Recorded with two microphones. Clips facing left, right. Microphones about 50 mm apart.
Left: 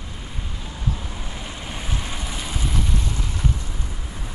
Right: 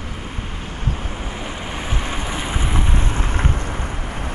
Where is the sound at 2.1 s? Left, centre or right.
Right.